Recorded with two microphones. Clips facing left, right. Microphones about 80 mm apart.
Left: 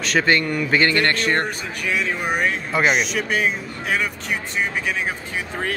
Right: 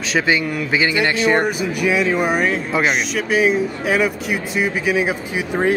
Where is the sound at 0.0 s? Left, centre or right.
Centre.